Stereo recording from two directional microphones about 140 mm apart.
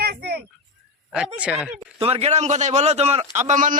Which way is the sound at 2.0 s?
45° right (ahead or behind).